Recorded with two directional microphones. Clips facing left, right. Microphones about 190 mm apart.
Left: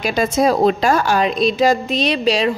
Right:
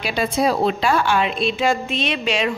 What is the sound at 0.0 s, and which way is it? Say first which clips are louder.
A woman's voice: left 4 dB; 45° left (ahead or behind).